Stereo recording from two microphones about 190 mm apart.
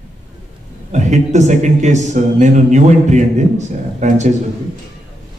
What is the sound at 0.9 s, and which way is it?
A man's voice, 40° right (ahead or behind).